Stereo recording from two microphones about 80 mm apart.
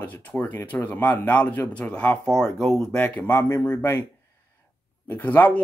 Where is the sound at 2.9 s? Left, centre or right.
Left.